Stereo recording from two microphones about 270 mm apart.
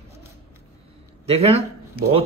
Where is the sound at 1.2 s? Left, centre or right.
Right.